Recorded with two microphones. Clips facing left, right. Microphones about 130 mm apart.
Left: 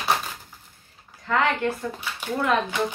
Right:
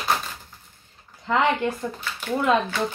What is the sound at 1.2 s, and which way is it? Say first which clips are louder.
Speech: right 1 dB; 15° right (ahead or behind).